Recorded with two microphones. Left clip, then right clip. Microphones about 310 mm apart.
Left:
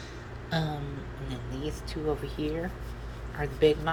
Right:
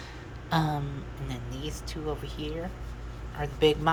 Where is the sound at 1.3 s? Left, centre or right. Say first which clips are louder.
Left 2 dB; centre.